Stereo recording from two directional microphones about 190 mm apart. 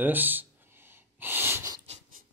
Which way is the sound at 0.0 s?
10° right (ahead or behind).